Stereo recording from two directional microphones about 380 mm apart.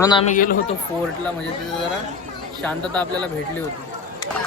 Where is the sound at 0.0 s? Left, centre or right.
Centre.